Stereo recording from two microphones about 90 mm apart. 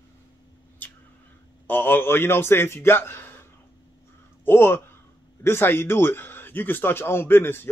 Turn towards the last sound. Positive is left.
turn(degrees=25)  # may be behind; listen again after turning